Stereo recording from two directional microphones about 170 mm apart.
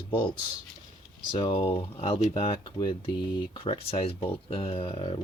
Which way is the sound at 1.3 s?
30° left (ahead or behind).